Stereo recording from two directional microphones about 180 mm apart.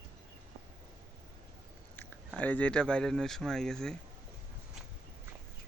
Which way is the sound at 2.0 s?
10° left (ahead or behind).